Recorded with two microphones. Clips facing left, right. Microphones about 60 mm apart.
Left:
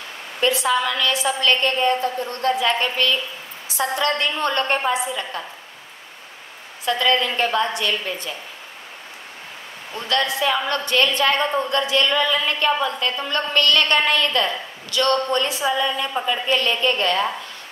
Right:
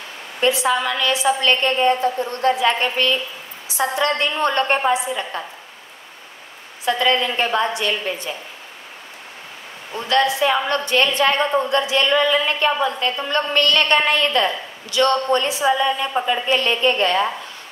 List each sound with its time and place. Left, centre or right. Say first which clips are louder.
0.4 s a woman's voice: right 1 dB; right
6.9 s a woman's voice: right 1 dB; right
10.0 s a woman's voice: right 4 dB; right